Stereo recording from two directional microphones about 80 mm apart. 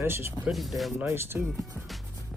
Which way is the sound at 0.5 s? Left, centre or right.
Centre.